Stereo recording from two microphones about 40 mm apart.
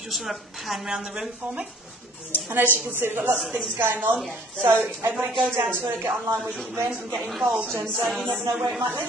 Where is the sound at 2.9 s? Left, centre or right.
Right.